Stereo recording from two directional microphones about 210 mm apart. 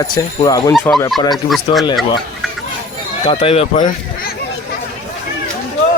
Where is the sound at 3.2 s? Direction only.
30° left (ahead or behind).